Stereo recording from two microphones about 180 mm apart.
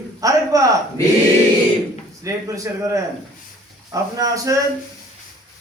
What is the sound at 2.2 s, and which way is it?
A man's voice, 15° right (ahead or behind).